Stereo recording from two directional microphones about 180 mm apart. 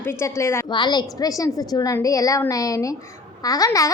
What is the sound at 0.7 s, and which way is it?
A child's voice, 25° left (ahead or behind).